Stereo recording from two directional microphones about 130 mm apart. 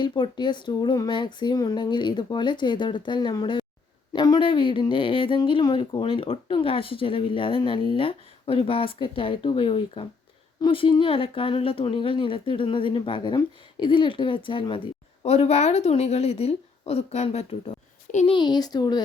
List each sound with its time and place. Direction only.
0.0 s speech: 35° left (ahead or behind)
15.2 s a woman's voice: 55° left (ahead or behind)
18.3 s speech: 35° left (ahead or behind)